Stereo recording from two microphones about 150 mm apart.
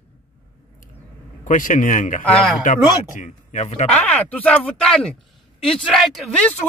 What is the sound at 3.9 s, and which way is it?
Speech, 10° left (ahead or behind).